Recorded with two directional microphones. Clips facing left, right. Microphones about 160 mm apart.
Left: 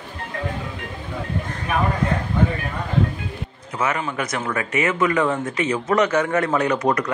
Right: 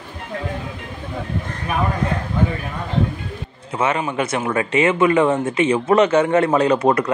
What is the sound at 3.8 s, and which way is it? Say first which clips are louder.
Speech: right 4 dB; 25° right (ahead or behind).